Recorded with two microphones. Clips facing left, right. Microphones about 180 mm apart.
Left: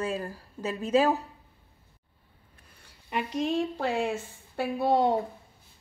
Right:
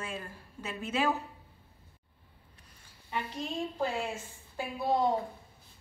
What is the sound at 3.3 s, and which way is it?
A woman's voice, 75° left (ahead or behind).